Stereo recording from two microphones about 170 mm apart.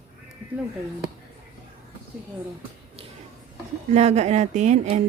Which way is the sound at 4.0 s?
40° right (ahead or behind).